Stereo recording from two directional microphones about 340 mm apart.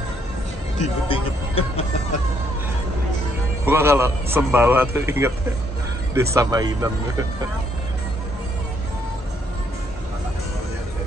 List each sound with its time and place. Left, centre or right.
1.0 s speech: centre
3.6 s a man's voice: centre
6.3 s a man's voice: centre